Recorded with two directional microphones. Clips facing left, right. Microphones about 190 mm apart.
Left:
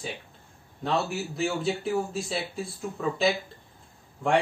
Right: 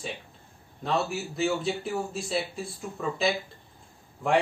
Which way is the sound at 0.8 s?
Centre (ahead or behind).